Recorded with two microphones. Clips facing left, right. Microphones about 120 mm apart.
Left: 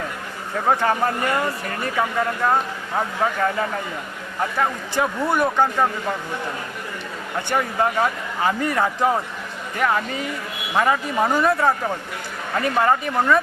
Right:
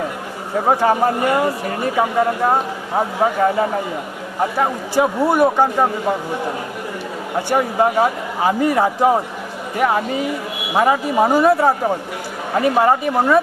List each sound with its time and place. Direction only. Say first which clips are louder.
0.5 s a man's voice: right 4 dB; 25° right (ahead or behind)
0.8 s a man's voice: right 5 dB; 15° right (ahead or behind)
5.0 s speech: right 5 dB; 30° right (ahead or behind)
5.6 s speech: right 4 dB; 15° right (ahead or behind)
11.5 s a man's voice: right 5 dB; 30° right (ahead or behind)
12.5 s speech: right 4 dB; 15° right (ahead or behind)